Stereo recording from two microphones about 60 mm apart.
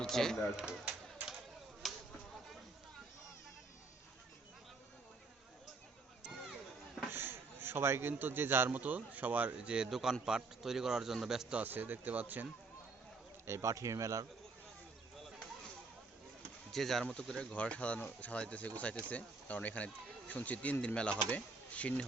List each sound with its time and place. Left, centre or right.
0.0 s speech: centre
0.5 s a sound: centre
1.8 s a sound: centre
7.1 s a man's voice: right
8.8 s a man's voice: right; by 11.5 s centre
11.5 s speech: right
13.5 s a man's voice: right
16.7 s speech: centre; by 22.0 s left